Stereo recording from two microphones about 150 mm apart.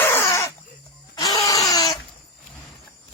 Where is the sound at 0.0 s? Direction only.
15° left (ahead or behind).